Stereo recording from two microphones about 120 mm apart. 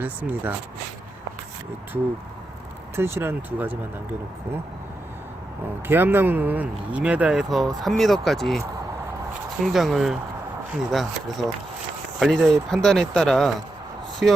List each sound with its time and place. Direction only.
0.0 s speech: 15° right (ahead or behind)
2.9 s speech: 20° right (ahead or behind)
5.9 s speech: 15° right (ahead or behind); by 8.6 s centre (ahead or behind)
9.6 s speech: centre (ahead or behind)
14.2 s speech: 10° right (ahead or behind)